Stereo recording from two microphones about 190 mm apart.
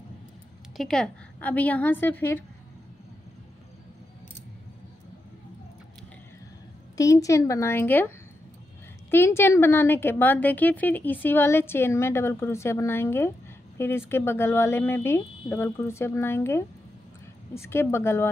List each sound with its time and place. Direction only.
0.7 s speech: 5° left (ahead or behind)
7.0 s speech: 15° left (ahead or behind)
9.1 s speech: 10° left (ahead or behind)